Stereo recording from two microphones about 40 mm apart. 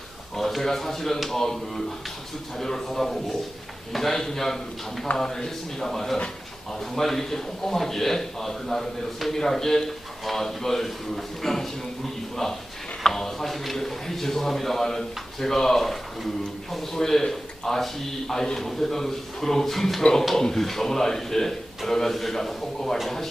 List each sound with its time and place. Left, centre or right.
0.3 s a man's voice: centre
20.0 s a man's voice: centre